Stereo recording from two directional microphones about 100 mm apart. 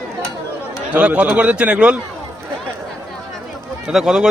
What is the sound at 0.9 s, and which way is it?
A man's voice, 15° right (ahead or behind).